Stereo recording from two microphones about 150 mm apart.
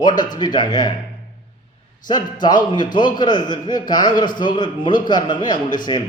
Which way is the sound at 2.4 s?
30° left (ahead or behind).